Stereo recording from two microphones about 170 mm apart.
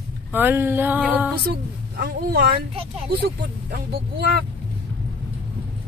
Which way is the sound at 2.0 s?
60° right (ahead or behind).